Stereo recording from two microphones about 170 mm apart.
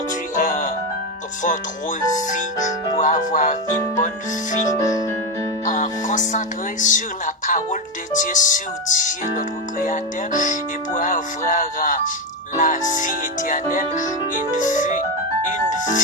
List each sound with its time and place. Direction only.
0.3 s music: 50° left (ahead or behind)
2.0 s music: 45° left (ahead or behind)
5.6 s music: 45° left (ahead or behind)
15.7 s speech: 45° left (ahead or behind)